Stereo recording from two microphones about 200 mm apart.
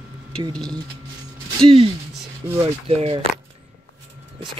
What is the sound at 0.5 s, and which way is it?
Speech, 5° left (ahead or behind).